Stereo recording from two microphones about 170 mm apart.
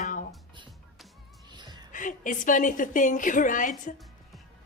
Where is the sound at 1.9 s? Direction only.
50° left (ahead or behind).